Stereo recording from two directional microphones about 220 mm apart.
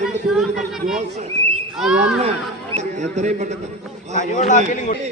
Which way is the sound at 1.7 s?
5° right (ahead or behind).